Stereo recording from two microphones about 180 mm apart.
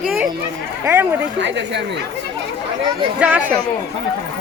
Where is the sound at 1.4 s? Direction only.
75° right (ahead or behind).